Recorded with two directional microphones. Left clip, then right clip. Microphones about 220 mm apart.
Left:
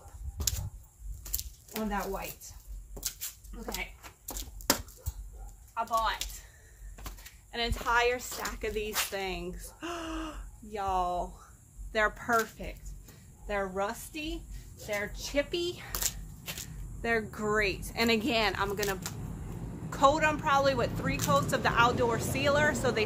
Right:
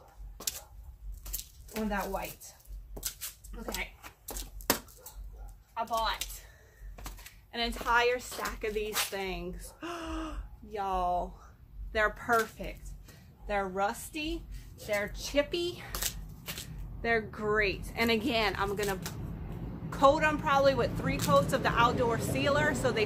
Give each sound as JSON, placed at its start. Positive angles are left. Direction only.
{"t": 1.9, "sound": "a woman's voice", "side_deg": 15}
{"t": 5.8, "sound": "speech", "side_deg": -15}
{"t": 7.0, "sound": "a woman's voice", "side_deg": 0}
{"t": 12.3, "sound": "speech", "side_deg": 0}
{"t": 17.0, "sound": "a woman's voice", "side_deg": 20}